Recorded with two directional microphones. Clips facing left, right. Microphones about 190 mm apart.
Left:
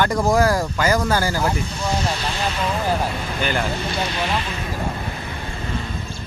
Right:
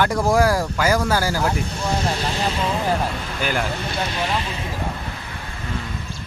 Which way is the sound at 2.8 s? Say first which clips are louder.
Even; centre (ahead or behind).